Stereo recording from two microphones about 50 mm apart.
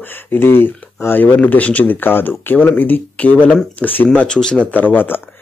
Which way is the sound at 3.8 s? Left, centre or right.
Left.